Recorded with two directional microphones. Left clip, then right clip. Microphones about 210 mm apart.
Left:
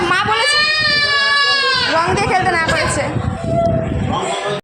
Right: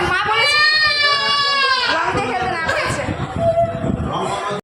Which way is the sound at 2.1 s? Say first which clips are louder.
Left 5 dB; 30° left (ahead or behind).